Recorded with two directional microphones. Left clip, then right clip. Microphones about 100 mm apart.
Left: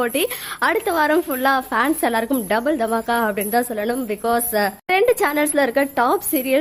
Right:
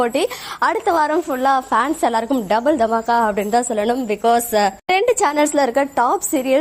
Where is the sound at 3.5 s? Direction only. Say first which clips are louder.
Right 3 dB; 15° right (ahead or behind).